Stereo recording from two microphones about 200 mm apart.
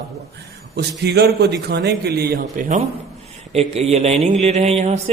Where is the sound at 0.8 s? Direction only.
55° right (ahead or behind).